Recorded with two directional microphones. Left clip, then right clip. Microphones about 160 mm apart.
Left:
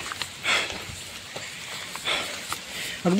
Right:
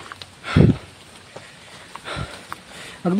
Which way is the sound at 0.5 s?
25° right (ahead or behind).